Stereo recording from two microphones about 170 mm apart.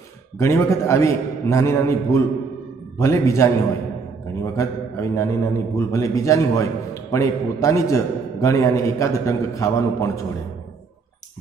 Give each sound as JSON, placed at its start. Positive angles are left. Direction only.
{"t": 0.4, "sound": "a man's voice", "side_deg": 15}